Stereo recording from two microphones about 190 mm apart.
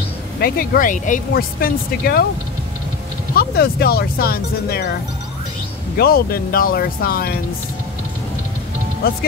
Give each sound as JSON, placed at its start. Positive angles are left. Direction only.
{"t": 0.4, "sound": "speech", "side_deg": 50}
{"t": 3.3, "sound": "speech", "side_deg": 55}
{"t": 5.9, "sound": "speech", "side_deg": 55}